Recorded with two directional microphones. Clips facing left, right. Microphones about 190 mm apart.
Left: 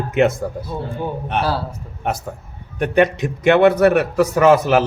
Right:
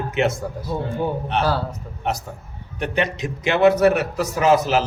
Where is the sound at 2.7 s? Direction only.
50° left (ahead or behind).